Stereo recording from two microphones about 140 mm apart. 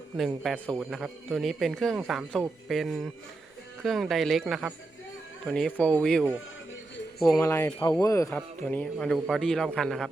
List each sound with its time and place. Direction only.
0.2 s a man's voice: centre (ahead or behind)
7.3 s speech: 20° left (ahead or behind)
8.4 s speech: 10° left (ahead or behind)
9.1 s a man's voice: 5° right (ahead or behind)
9.4 s a man's voice: 5° left (ahead or behind)